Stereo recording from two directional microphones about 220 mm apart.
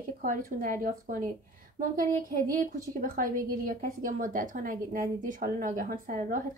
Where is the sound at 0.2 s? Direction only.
40° right (ahead or behind).